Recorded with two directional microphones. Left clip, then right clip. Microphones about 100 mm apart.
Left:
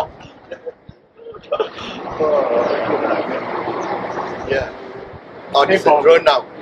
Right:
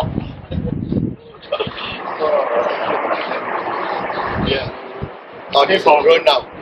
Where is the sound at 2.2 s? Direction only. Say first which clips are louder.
Left 1 dB; 5° left (ahead or behind).